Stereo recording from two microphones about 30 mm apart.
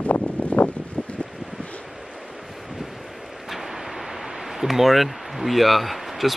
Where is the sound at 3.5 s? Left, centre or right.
Centre.